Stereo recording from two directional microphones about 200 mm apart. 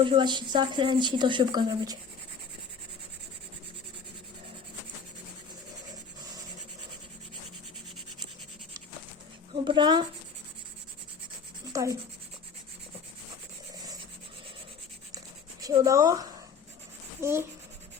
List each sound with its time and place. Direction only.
0.0 s speech: 25° right (ahead or behind)
9.6 s speech: 20° right (ahead or behind)
11.7 s speech: 15° right (ahead or behind)
15.6 s a child's voice: 15° right (ahead or behind)